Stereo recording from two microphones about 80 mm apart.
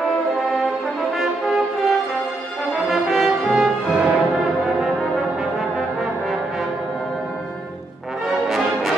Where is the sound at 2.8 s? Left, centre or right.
Centre.